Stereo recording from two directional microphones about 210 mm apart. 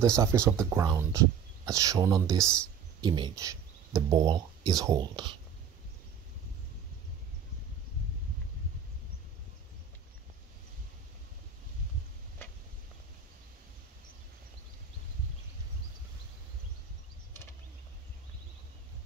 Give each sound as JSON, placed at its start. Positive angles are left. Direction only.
{"t": 0.0, "sound": "speech", "side_deg": -15}